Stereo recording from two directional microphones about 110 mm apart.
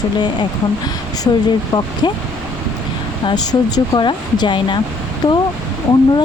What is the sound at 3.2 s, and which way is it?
Speech, 40° left (ahead or behind).